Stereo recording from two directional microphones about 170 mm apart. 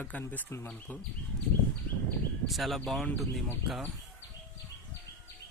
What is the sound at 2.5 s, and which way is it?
Speech, centre (ahead or behind).